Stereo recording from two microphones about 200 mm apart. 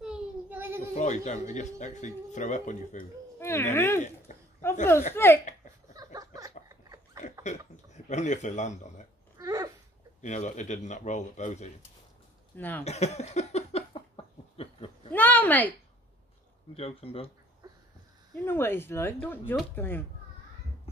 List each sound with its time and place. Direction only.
0.0 s child singing: 5° right (ahead or behind)
0.9 s speech: 35° left (ahead or behind)
3.3 s speech: 10° left (ahead or behind)
4.3 s a sound: 40° left (ahead or behind)
5.1 s speech: 10° left (ahead or behind)
6.1 s a sound: 15° right (ahead or behind)
7.4 s speech: 35° left (ahead or behind)
9.4 s a sound: 15° right (ahead or behind)
10.2 s speech: 35° left (ahead or behind)
12.5 s speech: 10° left (ahead or behind)
12.8 s a sound: 35° left (ahead or behind)
15.1 s a woman's voice: 10° left (ahead or behind)
16.7 s speech: 30° left (ahead or behind)
18.3 s speech: 10° left (ahead or behind)